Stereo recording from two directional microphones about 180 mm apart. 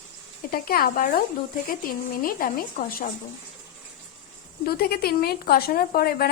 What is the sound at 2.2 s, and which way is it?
Speech, 50° left (ahead or behind).